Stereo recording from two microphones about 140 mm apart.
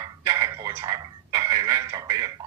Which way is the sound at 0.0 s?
25° right (ahead or behind).